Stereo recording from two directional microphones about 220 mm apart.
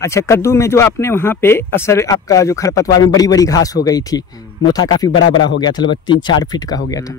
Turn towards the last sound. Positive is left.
turn(degrees=15)  # may be behind; listen again after turning